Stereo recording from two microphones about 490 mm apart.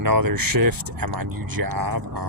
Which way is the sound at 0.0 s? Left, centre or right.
Right.